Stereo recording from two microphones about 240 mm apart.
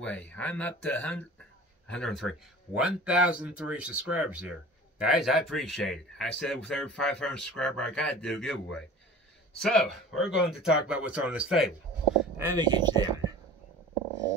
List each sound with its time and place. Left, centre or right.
0.0 s speech: centre
12.4 s speech: centre